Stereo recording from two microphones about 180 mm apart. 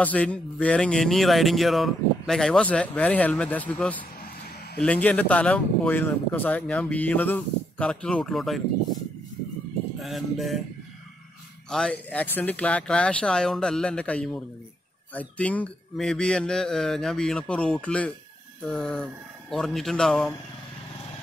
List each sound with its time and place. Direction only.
0.0 s speech: 10° left (ahead or behind)
9.9 s a man's voice: centre (ahead or behind)
11.7 s a man's voice: 5° left (ahead or behind)